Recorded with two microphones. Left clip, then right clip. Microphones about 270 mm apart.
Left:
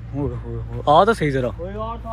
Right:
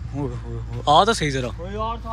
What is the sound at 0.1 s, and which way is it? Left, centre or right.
Speech, centre.